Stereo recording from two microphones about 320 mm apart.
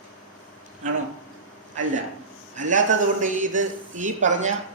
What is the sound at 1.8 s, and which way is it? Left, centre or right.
A man's voice, right.